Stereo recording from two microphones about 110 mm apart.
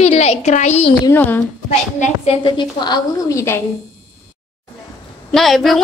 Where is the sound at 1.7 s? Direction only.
90° left.